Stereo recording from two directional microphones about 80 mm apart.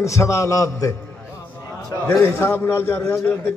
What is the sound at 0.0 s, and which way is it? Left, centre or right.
Speech, left.